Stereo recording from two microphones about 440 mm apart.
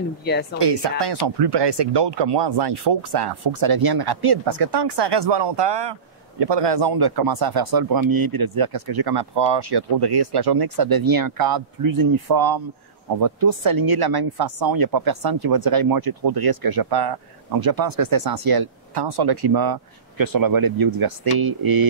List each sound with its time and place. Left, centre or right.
0.2 s a woman's voice: left
0.6 s speech: right